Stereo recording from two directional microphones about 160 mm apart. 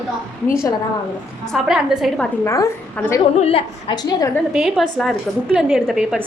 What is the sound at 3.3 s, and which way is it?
Speech, 35° left (ahead or behind).